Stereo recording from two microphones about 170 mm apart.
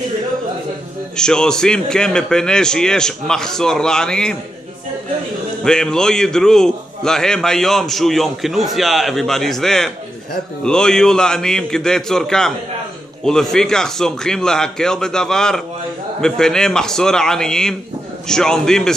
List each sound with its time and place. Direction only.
1.1 s a man's voice: 5° left (ahead or behind)
5.6 s a man's voice: 5° left (ahead or behind)